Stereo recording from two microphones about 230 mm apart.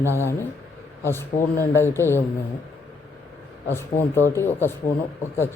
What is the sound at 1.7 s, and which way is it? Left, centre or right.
Speech, centre.